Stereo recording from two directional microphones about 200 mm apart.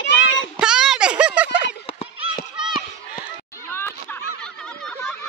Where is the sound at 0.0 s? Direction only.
65° left (ahead or behind).